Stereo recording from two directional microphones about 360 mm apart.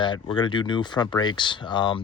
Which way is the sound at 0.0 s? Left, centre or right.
Centre.